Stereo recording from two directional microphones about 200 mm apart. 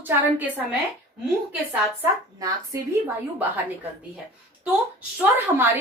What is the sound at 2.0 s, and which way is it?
Speech, 15° right (ahead or behind).